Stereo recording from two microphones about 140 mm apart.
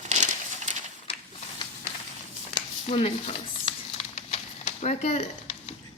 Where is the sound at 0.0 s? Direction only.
55° right (ahead or behind).